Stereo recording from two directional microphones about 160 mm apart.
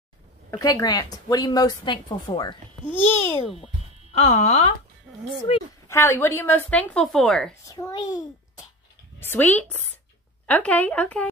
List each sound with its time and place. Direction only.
0.5 s a woman's voice: 20° left (ahead or behind)
2.8 s a woman's voice: 15° left (ahead or behind)
3.5 s speech: 40° left (ahead or behind)
5.9 s a woman's voice: 15° left (ahead or behind)
7.6 s a woman's voice: 25° left (ahead or behind)
9.2 s a woman's voice: 10° left (ahead or behind)